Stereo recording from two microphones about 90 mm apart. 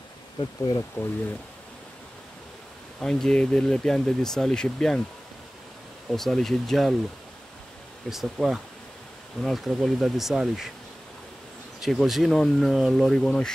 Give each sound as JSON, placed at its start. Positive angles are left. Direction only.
{"t": 0.4, "sound": "speech", "side_deg": 50}
{"t": 3.0, "sound": "speech", "side_deg": 5}
{"t": 6.1, "sound": "speech", "side_deg": 5}
{"t": 8.1, "sound": "speech", "side_deg": -5}
{"t": 11.8, "sound": "speech", "side_deg": 0}